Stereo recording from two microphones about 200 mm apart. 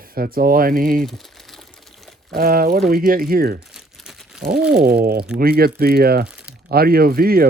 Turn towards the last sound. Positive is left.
turn(degrees=-50)  # may be behind; listen again after turning